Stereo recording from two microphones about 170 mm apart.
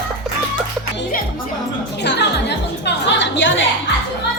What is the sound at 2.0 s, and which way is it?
Music, 85° left.